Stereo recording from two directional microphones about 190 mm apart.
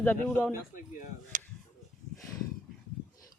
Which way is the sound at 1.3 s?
45° right (ahead or behind).